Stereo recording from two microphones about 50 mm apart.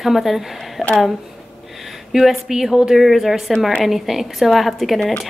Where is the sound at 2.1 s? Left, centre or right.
Centre.